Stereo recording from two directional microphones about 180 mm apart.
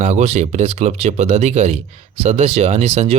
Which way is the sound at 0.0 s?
40° right (ahead or behind).